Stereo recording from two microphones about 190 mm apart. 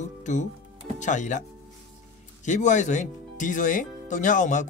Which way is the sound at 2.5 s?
40° left (ahead or behind).